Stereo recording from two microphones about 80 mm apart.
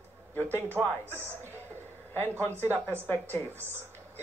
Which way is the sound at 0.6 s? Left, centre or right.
Right.